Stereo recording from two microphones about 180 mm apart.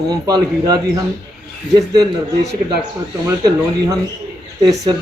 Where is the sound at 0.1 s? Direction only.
20° right (ahead or behind).